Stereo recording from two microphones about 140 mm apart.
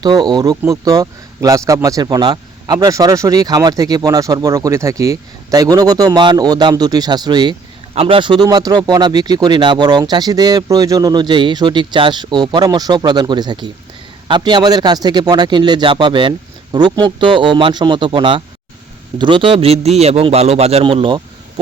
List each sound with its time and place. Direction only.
0.0 s a man's voice: 30° right (ahead or behind)